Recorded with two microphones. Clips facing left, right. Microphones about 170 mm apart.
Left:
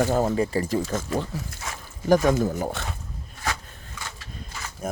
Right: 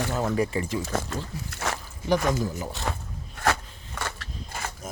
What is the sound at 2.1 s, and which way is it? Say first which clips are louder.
Speech: left 5 dB; 50° left (ahead or behind).